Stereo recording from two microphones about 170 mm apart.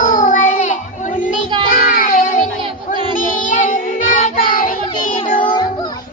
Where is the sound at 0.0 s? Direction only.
50° left (ahead or behind).